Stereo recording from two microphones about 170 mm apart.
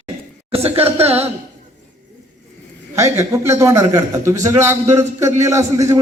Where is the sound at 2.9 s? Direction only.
15° right (ahead or behind).